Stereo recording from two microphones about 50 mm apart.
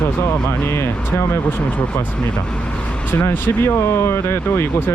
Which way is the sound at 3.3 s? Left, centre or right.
Left.